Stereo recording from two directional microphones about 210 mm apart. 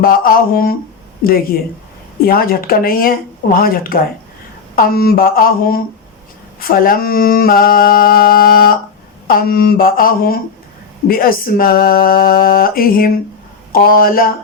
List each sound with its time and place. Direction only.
0.0 s mantra: 45° left (ahead or behind)